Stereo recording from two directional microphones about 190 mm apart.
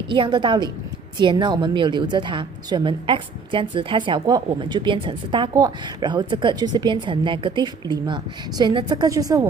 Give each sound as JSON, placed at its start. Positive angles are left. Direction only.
{"t": 0.0, "sound": "a woman's voice", "side_deg": -25}